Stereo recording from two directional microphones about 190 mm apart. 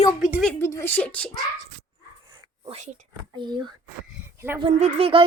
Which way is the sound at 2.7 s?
35° right (ahead or behind).